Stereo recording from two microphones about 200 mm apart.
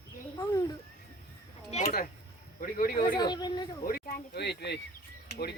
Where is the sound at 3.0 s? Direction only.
20° left (ahead or behind).